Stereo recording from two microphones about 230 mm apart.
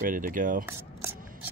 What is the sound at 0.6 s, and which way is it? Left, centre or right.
Rub, centre.